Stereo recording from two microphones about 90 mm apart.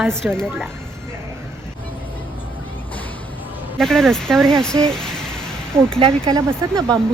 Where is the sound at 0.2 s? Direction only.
15° right (ahead or behind).